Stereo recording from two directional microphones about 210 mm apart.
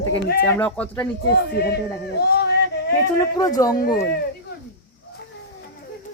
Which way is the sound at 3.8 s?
45° left (ahead or behind).